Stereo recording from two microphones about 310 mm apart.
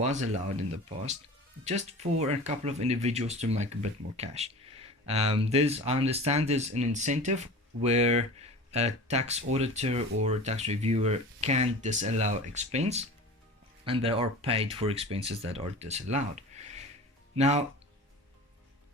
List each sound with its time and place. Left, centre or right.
0.0 s speech: right
1.6 s speech: right